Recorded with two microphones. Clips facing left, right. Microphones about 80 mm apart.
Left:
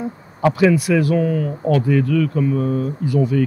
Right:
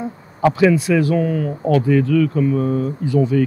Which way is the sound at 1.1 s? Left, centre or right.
Right.